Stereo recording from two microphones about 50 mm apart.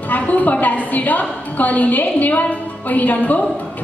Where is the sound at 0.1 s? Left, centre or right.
Left.